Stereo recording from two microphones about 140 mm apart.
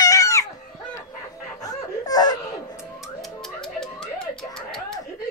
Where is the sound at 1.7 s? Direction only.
25° left (ahead or behind).